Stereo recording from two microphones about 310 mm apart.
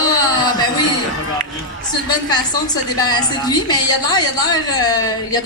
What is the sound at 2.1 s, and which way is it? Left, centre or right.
A woman's voice, centre.